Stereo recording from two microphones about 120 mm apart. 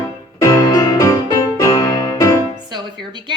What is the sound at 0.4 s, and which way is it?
Music, 30° left (ahead or behind).